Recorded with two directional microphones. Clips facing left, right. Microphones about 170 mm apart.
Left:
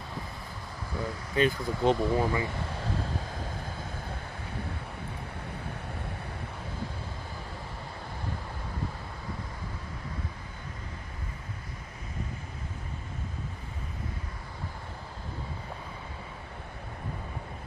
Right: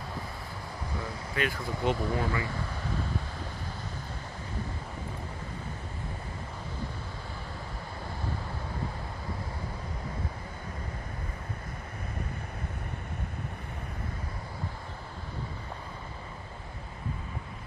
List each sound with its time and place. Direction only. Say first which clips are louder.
1.3 s speech: left 6 dB; 25° left (ahead or behind)